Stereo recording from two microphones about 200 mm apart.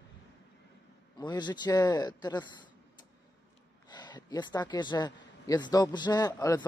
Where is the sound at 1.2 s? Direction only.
20° left (ahead or behind).